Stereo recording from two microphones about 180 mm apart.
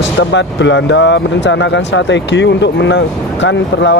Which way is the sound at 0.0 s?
85° left.